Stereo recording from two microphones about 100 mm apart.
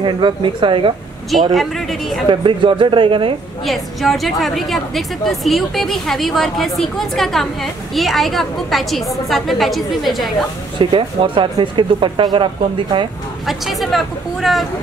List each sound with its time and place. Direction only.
0.0 s speech: 55° right (ahead or behind)
1.5 s a woman's voice: centre (ahead or behind)
2.2 s speech: 55° right (ahead or behind)
3.6 s a woman's voice: centre (ahead or behind)
10.8 s speech: 60° right (ahead or behind)
13.5 s a woman's voice: centre (ahead or behind)